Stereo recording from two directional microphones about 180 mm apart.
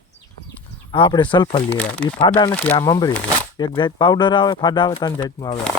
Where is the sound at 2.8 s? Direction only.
20° left (ahead or behind).